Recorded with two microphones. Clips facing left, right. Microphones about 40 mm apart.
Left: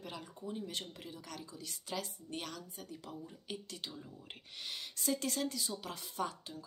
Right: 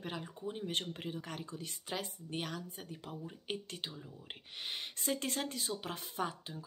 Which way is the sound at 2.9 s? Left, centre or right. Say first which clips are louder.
Even; right.